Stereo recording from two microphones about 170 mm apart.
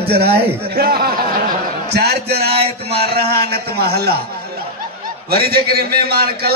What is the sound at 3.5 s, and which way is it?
Speech, 70° right (ahead or behind).